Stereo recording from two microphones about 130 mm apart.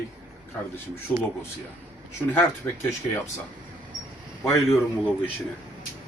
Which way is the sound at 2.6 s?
20° left (ahead or behind).